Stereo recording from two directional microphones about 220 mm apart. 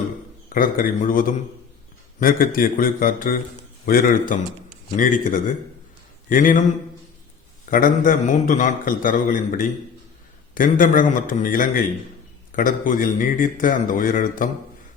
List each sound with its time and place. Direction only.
0.5 s a man's voice: 40° left (ahead or behind)
7.7 s a man's voice: 40° left (ahead or behind)